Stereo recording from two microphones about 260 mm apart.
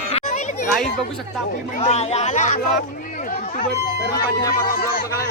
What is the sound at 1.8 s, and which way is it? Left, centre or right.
Speech, left.